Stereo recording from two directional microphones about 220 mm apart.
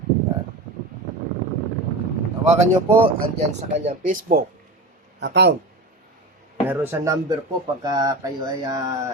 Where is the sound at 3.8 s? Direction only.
35° right (ahead or behind).